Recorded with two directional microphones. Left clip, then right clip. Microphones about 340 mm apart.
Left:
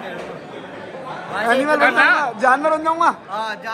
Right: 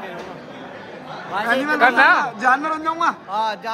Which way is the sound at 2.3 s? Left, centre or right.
Centre.